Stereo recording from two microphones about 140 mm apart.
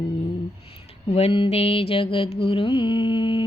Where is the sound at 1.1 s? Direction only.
40° left (ahead or behind).